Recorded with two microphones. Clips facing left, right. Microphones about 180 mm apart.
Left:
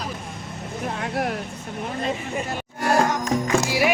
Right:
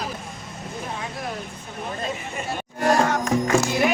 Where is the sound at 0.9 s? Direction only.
65° left (ahead or behind).